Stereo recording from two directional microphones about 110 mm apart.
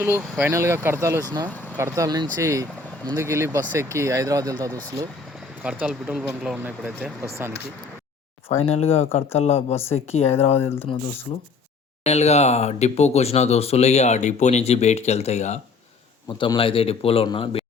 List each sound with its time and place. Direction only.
0.0 s speech: 20° right (ahead or behind)
1.5 s vehicle: 15° right (ahead or behind)
2.0 s speech: 35° right (ahead or behind)
5.6 s speech: 10° right (ahead or behind)
8.5 s speech: 65° left (ahead or behind)
10.6 s speech: 20° left (ahead or behind)
12.0 s speech: 80° left
16.6 s speech: 55° left (ahead or behind)